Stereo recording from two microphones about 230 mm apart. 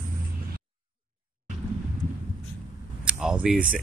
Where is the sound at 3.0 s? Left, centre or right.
Centre.